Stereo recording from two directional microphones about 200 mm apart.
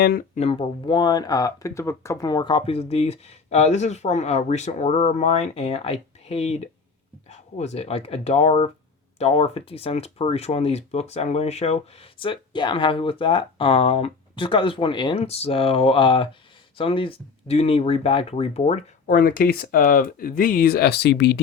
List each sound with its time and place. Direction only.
0.0 s speech: 50° left (ahead or behind)
0.3 s speech: 30° left (ahead or behind); by 21.3 s 55° left (ahead or behind)